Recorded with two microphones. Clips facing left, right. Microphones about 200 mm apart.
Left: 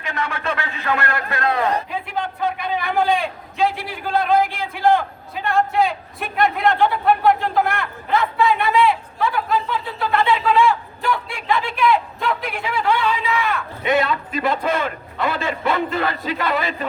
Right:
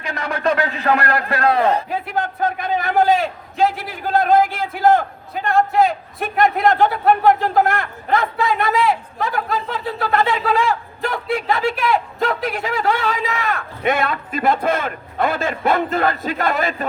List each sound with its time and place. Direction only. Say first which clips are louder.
0.0 s a man's voice: right 4 dB; 35° right (ahead or behind)
3.6 s a sound: right 2 dB; 45° right (ahead or behind)
6.4 s a man's voice: right 2 dB; 45° right (ahead or behind)